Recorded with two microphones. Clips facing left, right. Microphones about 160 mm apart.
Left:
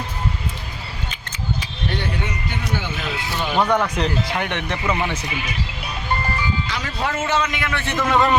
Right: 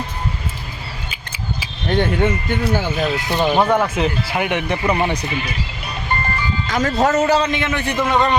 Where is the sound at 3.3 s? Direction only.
35° right (ahead or behind).